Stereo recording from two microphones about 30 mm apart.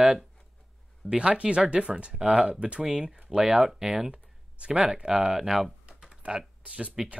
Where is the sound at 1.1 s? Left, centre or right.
Right; by 4.0 s centre.